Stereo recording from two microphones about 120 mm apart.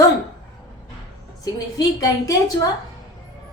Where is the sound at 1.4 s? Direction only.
30° left (ahead or behind).